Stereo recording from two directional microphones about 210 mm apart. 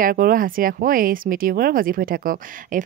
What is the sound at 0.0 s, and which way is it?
Speech, 45° right (ahead or behind).